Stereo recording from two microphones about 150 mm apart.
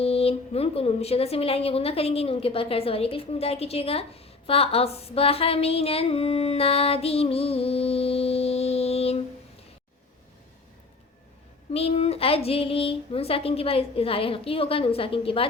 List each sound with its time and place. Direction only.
0.0 s a woman's voice: 40° left (ahead or behind)
11.7 s a woman's voice: 40° left (ahead or behind)